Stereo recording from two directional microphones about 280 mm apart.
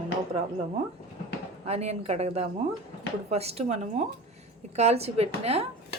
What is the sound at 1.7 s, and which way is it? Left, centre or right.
A woman's voice, right.